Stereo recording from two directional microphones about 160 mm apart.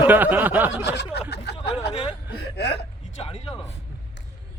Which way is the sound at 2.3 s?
90° left.